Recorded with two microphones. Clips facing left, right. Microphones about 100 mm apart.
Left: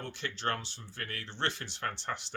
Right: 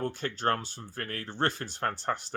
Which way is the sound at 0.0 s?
45° right (ahead or behind).